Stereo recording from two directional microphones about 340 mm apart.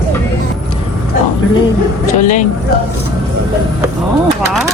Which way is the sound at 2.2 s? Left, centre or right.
Left.